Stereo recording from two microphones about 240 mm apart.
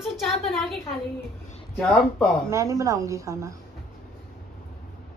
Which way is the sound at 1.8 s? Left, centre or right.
Centre.